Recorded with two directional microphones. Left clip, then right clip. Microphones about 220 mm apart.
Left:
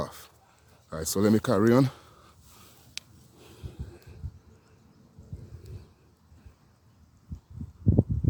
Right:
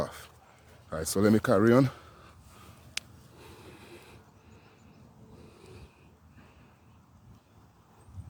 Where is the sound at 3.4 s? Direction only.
5° left (ahead or behind).